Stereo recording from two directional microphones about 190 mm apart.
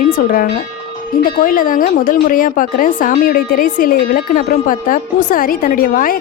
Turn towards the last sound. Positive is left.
turn(degrees=45)  # may be behind; listen again after turning